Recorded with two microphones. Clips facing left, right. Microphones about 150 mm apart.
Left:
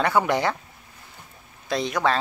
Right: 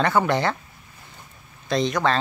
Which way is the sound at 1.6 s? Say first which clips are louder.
Right 2 dB; 10° left (ahead or behind).